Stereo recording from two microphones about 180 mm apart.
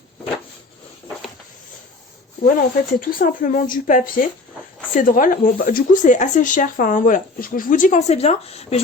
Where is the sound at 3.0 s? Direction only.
50° left (ahead or behind).